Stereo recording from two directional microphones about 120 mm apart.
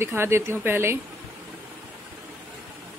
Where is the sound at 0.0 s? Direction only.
20° right (ahead or behind).